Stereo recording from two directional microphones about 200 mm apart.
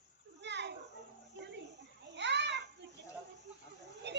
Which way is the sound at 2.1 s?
60° right (ahead or behind).